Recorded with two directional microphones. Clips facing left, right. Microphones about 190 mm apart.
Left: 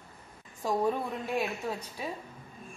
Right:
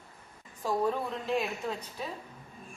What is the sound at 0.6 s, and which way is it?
Speech, 15° left (ahead or behind).